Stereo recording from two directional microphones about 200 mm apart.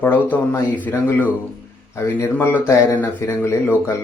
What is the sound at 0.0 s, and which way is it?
Speech, 10° left (ahead or behind).